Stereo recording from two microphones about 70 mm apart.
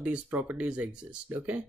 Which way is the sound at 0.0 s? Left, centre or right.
Centre.